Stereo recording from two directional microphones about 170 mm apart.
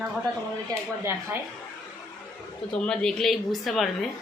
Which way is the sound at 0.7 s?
15° right (ahead or behind).